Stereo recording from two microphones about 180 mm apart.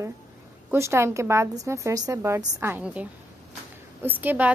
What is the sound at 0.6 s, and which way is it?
A woman's voice, 15° right (ahead or behind).